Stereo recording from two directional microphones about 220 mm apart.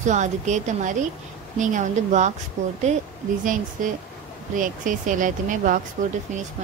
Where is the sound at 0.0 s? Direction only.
35° right (ahead or behind).